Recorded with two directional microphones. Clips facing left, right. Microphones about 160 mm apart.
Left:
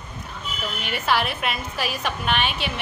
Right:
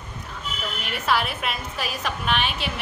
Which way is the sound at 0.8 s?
Centre (ahead or behind).